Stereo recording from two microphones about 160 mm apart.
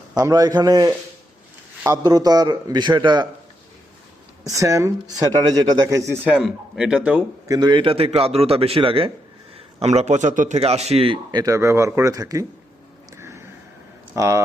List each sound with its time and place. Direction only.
0.2 s a man's voice: 20° right (ahead or behind)
4.4 s a man's voice: 20° right (ahead or behind)
6.2 s speech: 5° right (ahead or behind)
7.4 s speech: 25° right (ahead or behind)
13.1 s a sound: 15° right (ahead or behind)
14.2 s a man's voice: 20° right (ahead or behind)